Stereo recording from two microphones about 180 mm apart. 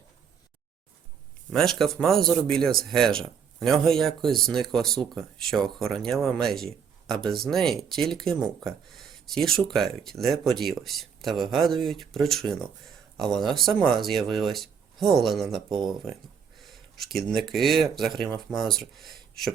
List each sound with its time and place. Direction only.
1.5 s speech: centre (ahead or behind)
15.7 s speech: 25° right (ahead or behind)
16.6 s speech: centre (ahead or behind)